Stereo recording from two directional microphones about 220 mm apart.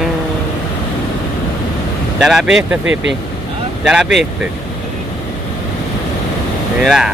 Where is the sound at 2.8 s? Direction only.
55° right (ahead or behind).